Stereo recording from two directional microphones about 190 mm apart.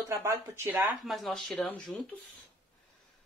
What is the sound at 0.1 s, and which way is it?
Speech, 15° right (ahead or behind).